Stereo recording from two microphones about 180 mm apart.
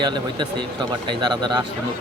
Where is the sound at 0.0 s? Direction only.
25° right (ahead or behind).